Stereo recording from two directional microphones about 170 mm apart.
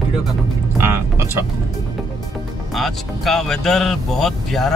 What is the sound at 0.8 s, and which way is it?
Speech, 15° right (ahead or behind).